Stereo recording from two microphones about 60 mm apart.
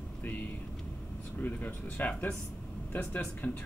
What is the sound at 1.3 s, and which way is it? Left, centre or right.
Speech, left.